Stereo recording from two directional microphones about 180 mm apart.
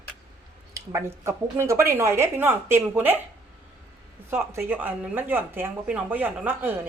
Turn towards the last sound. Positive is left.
turn(degrees=-10)  # may be behind; listen again after turning